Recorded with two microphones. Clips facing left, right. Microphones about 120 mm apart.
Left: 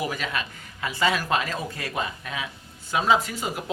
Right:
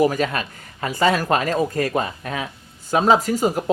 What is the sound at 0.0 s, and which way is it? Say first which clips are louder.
Speech: right 10 dB; 45° right (ahead or behind).